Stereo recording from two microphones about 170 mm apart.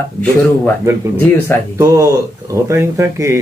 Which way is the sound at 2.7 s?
15° right (ahead or behind).